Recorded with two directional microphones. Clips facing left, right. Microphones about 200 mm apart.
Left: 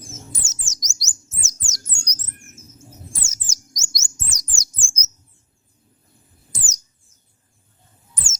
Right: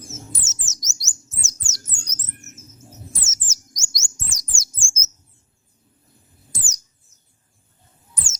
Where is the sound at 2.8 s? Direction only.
10° left (ahead or behind).